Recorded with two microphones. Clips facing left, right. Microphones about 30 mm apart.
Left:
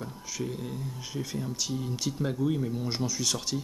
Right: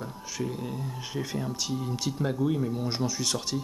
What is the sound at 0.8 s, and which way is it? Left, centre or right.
Speech, centre.